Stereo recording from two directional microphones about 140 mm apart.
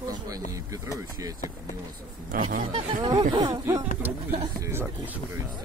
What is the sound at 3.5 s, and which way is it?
Speech, 25° right (ahead or behind).